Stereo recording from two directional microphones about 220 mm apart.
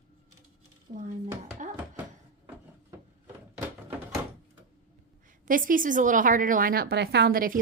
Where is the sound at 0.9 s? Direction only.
35° right (ahead or behind).